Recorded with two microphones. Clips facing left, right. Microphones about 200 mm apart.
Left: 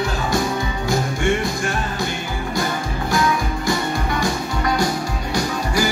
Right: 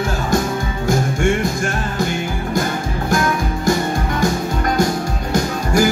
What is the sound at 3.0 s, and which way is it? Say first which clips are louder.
Music: right 1 dB; 45° right (ahead or behind).